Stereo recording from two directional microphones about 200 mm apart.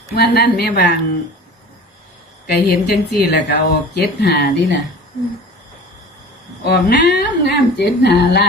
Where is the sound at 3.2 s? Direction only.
55° left (ahead or behind).